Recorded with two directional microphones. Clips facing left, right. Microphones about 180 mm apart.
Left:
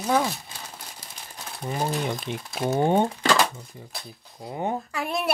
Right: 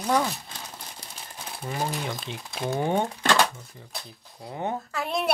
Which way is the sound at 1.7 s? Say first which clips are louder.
Left 3 dB; 15° left (ahead or behind).